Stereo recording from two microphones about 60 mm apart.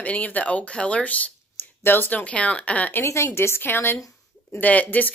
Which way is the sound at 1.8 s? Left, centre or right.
Left.